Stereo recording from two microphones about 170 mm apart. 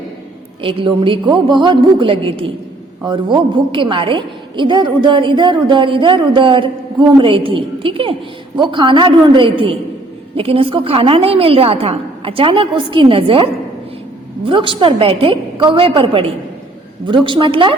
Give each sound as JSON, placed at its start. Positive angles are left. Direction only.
{"t": 0.6, "sound": "a woman's voice", "side_deg": -30}